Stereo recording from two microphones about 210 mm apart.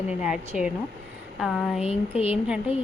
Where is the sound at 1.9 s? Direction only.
30° left (ahead or behind).